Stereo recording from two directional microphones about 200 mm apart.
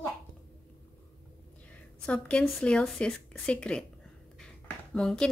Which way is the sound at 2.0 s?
5° left (ahead or behind).